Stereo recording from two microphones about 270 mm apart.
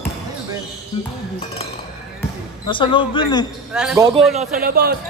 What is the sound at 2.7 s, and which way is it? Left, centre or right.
Speech, centre.